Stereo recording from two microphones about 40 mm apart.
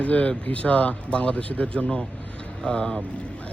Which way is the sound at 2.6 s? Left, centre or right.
Left.